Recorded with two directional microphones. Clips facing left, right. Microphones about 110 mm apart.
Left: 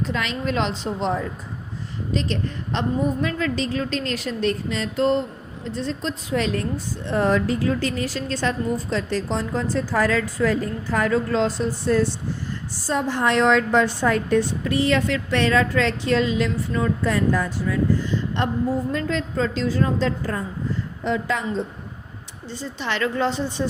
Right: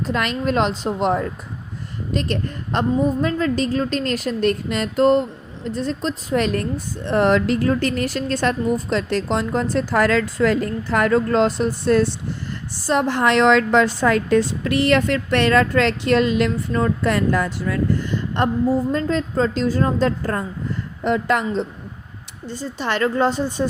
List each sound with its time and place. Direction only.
0.0 s a woman's voice: 50° right (ahead or behind); by 7.6 s 75° right (ahead or behind)
7.6 s a woman's voice: 55° right (ahead or behind)
8.9 s a woman's voice: 70° right (ahead or behind); by 18.4 s 55° right (ahead or behind)
18.9 s a woman's voice: 40° right (ahead or behind)
21.0 s a woman's voice: 60° right (ahead or behind)
22.4 s a woman's voice: 45° right (ahead or behind)